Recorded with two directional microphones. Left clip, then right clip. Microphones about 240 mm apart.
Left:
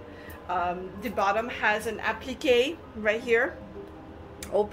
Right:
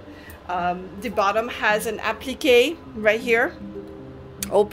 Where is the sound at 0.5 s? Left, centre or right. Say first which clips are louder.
Right 4 dB; right.